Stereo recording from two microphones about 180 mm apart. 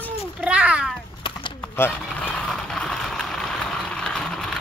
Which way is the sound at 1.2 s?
25° left (ahead or behind).